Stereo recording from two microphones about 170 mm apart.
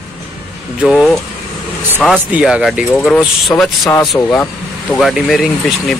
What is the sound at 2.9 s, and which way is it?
Speech, 5° left (ahead or behind).